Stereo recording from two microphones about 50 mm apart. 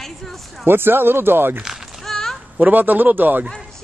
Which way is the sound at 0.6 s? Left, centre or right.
Right.